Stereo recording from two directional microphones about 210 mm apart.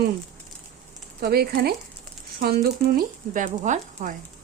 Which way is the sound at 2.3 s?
45° right (ahead or behind).